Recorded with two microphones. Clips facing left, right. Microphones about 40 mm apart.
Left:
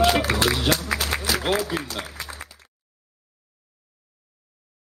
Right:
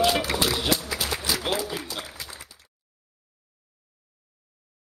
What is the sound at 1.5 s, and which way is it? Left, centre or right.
Applause, left.